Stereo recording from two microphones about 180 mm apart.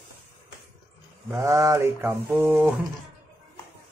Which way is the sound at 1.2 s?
20° right (ahead or behind).